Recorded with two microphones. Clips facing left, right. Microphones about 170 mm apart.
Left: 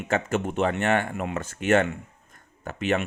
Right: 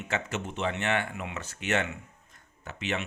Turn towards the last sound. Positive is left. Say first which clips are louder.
# left 8 dB
turn(degrees=50)  # may be behind; listen again after turning